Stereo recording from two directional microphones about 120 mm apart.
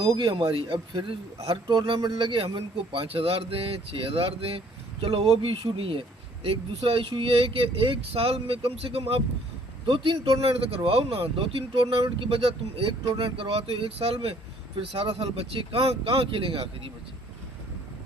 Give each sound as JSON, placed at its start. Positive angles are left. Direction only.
{"t": 0.0, "sound": "a man's voice", "side_deg": -35}